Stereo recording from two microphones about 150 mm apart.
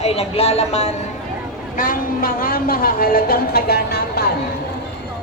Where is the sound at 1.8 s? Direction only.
70° left (ahead or behind); by 4.2 s 90° left.